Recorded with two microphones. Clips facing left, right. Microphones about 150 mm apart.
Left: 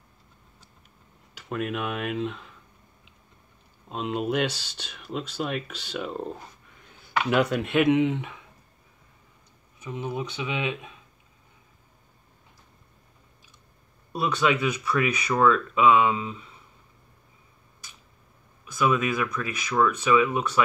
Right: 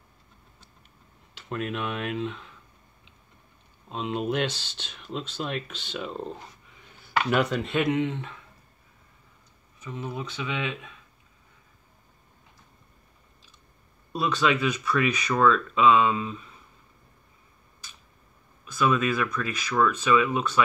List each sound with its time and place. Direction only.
1.5 s speech: 5° left (ahead or behind)
3.9 s speech: 5° left (ahead or behind)
9.8 s speech: 15° left (ahead or behind)
14.1 s speech: 10° left (ahead or behind)
18.7 s speech: 15° left (ahead or behind)